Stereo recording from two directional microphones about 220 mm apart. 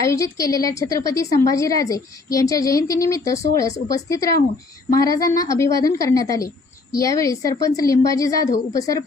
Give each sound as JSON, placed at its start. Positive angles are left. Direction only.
{"t": 0.0, "sound": "a woman's voice", "side_deg": 15}